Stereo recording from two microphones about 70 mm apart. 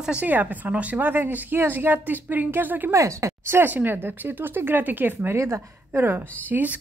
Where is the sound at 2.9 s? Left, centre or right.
Right.